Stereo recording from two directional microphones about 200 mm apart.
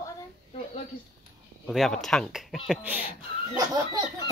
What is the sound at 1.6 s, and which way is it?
Speech, centre (ahead or behind).